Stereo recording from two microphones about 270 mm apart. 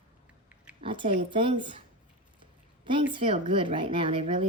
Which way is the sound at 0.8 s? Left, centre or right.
Centre.